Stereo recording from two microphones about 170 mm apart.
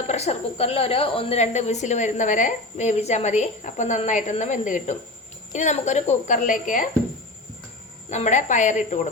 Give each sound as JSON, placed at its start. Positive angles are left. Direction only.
{"t": 0.1, "sound": "a woman's voice", "side_deg": 40}
{"t": 8.1, "sound": "a woman's voice", "side_deg": 45}